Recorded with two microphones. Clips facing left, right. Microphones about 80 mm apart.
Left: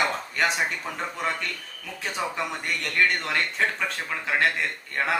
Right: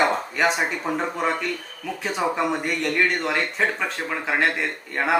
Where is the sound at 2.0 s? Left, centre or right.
Centre.